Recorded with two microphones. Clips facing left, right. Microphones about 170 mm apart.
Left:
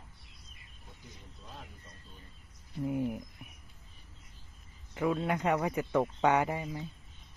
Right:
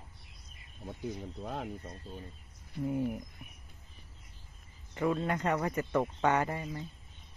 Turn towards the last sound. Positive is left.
turn(degrees=15)  # may be behind; listen again after turning